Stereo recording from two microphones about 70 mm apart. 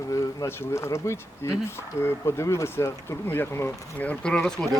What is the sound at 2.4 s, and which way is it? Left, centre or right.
Speech, left.